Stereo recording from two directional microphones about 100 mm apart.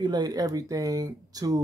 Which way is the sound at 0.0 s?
45° right (ahead or behind).